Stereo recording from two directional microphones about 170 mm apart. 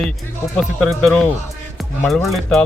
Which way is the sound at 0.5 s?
Centre (ahead or behind).